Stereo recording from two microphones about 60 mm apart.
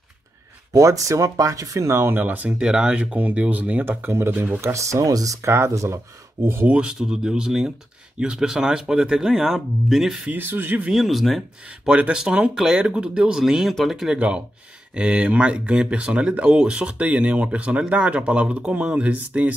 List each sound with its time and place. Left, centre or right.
0.7 s speech: right
2.2 s speech: right
2.6 s speech: centre
4.0 s speech: right
4.3 s speech: right
4.6 s speech: right
6.7 s speech: centre
10.3 s speech: right
10.9 s speech: centre
11.8 s speech: centre
14.1 s speech: centre